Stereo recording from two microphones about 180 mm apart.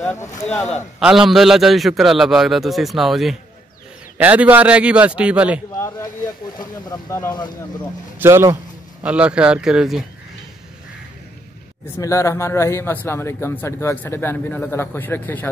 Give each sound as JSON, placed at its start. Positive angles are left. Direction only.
{"t": 0.1, "sound": "speech", "side_deg": 15}
{"t": 0.9, "sound": "a man's voice", "side_deg": -5}
{"t": 5.8, "sound": "a sound", "side_deg": 15}
{"t": 6.6, "sound": "speech", "side_deg": 20}
{"t": 8.2, "sound": "a man's voice", "side_deg": -15}
{"t": 12.0, "sound": "speech", "side_deg": 15}